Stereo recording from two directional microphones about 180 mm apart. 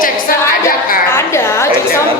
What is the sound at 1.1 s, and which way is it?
Speech, 15° left (ahead or behind).